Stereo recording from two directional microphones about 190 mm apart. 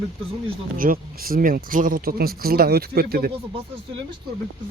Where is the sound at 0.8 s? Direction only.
50° right (ahead or behind).